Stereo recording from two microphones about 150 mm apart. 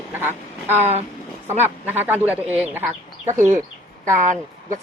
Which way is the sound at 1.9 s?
10° right (ahead or behind).